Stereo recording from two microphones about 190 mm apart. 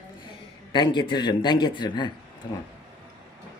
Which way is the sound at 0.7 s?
25° left (ahead or behind).